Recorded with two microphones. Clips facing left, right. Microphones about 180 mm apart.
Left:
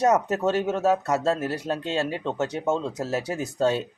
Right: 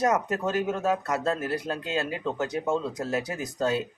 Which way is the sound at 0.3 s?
25° left (ahead or behind).